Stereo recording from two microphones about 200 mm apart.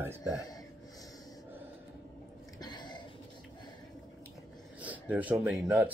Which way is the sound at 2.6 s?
20° left (ahead or behind).